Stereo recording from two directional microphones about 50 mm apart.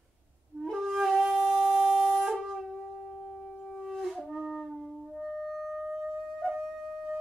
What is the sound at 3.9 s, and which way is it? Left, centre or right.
Wind instrument, centre.